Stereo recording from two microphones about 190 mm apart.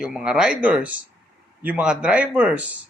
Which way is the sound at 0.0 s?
5° right (ahead or behind).